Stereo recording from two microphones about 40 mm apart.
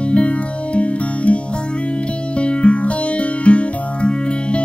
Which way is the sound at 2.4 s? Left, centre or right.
Left.